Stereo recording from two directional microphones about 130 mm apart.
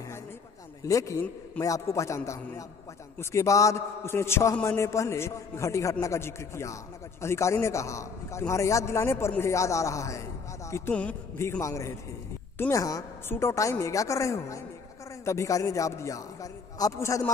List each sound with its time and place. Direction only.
0.8 s a man's voice: 25° left (ahead or behind)
10.9 s a man's voice: 10° left (ahead or behind)